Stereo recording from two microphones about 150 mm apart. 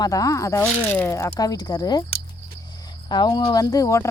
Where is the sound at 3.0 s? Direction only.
30° left (ahead or behind).